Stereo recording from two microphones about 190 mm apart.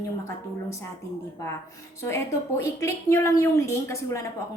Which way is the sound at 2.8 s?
15° left (ahead or behind).